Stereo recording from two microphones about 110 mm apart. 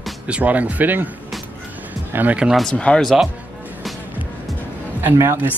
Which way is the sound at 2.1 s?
15° right (ahead or behind).